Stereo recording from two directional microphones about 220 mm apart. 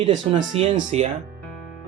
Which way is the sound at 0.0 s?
30° right (ahead or behind).